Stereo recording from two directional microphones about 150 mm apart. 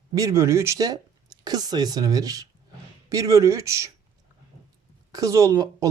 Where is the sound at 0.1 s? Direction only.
20° right (ahead or behind).